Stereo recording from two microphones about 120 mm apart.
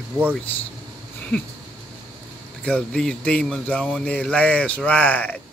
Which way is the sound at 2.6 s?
10° left (ahead or behind).